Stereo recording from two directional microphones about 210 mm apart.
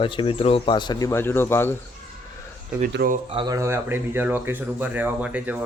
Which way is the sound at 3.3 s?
20° right (ahead or behind).